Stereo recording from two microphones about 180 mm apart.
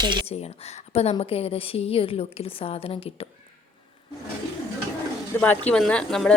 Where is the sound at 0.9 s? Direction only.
35° left (ahead or behind).